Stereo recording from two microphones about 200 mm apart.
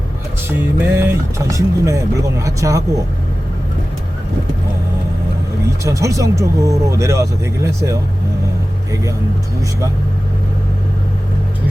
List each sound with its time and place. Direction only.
0.4 s speech: 10° right (ahead or behind)
5.8 s speech: 15° right (ahead or behind)